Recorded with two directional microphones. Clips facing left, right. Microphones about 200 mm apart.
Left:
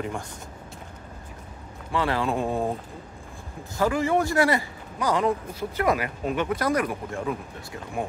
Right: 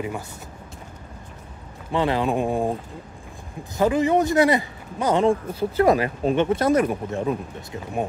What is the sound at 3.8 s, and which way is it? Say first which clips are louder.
Speech: right 4 dB; 20° right (ahead or behind).